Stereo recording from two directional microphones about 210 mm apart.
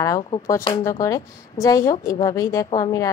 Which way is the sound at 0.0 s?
15° left (ahead or behind).